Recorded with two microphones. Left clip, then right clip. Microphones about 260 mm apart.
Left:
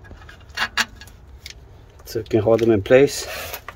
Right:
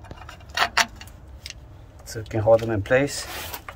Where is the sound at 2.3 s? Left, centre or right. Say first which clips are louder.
Left 2 dB; left.